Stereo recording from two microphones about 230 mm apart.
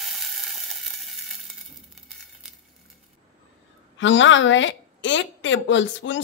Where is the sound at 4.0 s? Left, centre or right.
Left.